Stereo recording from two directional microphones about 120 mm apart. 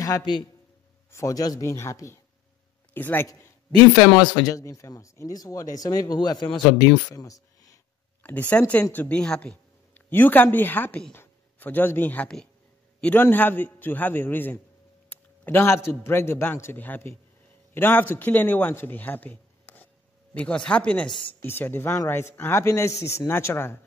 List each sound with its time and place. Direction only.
0.0 s a man's voice: 35° left (ahead or behind)
3.8 s speech: 10° left (ahead or behind)
4.2 s speech: 35° left (ahead or behind)
8.2 s a man's voice: 15° left (ahead or behind)